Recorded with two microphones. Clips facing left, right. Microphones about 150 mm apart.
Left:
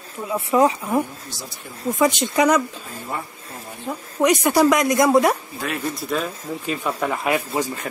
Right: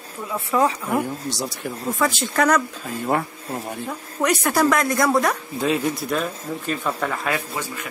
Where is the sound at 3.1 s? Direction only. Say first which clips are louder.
Right 7 dB; 75° right (ahead or behind).